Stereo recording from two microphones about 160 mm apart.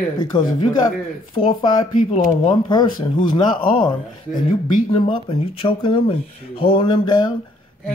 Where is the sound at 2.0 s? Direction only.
50° left (ahead or behind).